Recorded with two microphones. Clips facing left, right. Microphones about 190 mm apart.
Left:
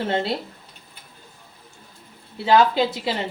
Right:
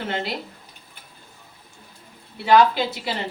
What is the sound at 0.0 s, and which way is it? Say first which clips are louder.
Speech: left 4 dB; 30° left (ahead or behind).